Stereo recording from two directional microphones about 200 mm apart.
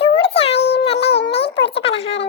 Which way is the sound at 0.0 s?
30° left (ahead or behind).